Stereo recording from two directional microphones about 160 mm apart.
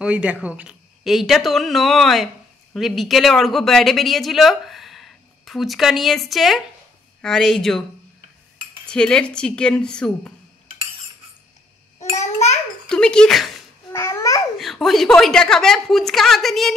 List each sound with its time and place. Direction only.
0.0 s speech: 10° right (ahead or behind)
8.8 s speech: 5° left (ahead or behind)
12.0 s a sound: 45° left (ahead or behind)
12.8 s speech: 5° left (ahead or behind)
13.9 s babbling: 15° left (ahead or behind)
14.6 s speech: centre (ahead or behind)